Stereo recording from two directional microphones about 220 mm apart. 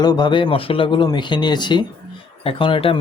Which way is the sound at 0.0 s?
20° left (ahead or behind).